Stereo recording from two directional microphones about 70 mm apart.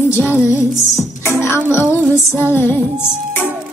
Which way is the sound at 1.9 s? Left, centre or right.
Left.